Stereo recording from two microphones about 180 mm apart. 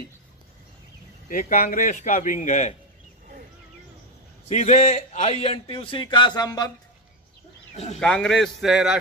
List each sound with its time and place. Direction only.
1.5 s a man's voice: 50° left (ahead or behind)
4.5 s a man's voice: 40° left (ahead or behind); by 6.7 s 20° left (ahead or behind)
7.7 s speech: 35° left (ahead or behind)
8.0 s a man's voice: 5° left (ahead or behind)